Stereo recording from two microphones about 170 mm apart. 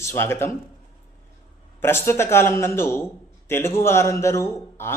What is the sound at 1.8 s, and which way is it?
A man's voice, 15° left (ahead or behind).